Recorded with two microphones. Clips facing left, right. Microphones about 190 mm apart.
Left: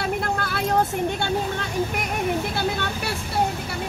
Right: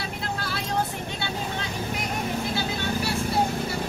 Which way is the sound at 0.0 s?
55° left (ahead or behind).